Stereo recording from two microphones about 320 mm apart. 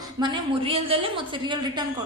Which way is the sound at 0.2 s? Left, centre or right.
Centre.